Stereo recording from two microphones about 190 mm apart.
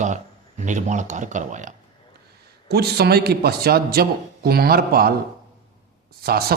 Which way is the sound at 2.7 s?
55° right (ahead or behind).